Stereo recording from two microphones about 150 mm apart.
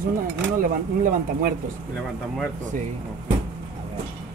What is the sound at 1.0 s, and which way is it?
Speech, 70° right (ahead or behind).